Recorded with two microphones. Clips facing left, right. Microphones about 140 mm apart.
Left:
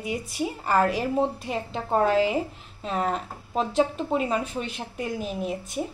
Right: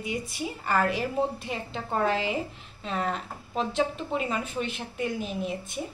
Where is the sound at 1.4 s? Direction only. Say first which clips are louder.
Left 4 dB; centre (ahead or behind).